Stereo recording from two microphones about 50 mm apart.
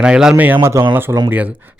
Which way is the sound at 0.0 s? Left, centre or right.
Centre.